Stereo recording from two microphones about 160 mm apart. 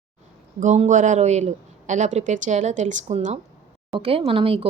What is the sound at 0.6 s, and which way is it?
A woman's voice, 50° right (ahead or behind).